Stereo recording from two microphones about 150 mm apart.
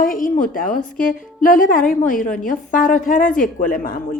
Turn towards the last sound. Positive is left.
turn(degrees=70)  # may be behind; listen again after turning